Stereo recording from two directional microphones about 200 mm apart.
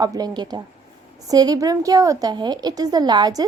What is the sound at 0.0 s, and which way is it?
A woman's voice, 20° right (ahead or behind).